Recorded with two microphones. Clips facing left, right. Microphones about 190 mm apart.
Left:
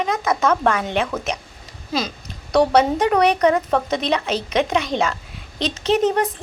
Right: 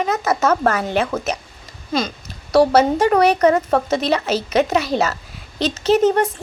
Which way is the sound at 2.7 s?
Centre (ahead or behind).